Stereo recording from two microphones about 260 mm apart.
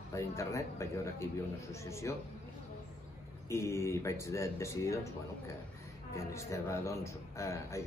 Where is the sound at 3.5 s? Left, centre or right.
Centre.